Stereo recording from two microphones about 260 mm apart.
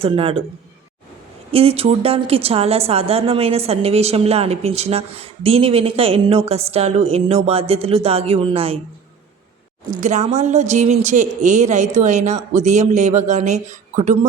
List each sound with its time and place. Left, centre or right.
0.0 s a woman's voice: right
1.5 s a woman's voice: right
10.0 s a woman's voice: right